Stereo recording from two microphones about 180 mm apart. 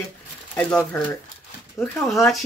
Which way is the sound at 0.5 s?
5° left (ahead or behind).